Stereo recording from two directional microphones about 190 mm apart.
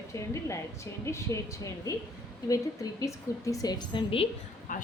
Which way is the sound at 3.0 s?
15° left (ahead or behind).